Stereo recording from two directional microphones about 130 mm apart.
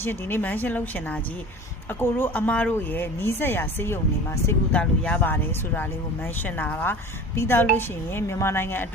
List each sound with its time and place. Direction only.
0.0 s speech: 15° left (ahead or behind)